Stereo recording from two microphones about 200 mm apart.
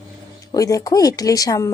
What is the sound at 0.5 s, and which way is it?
Speech, 15° left (ahead or behind).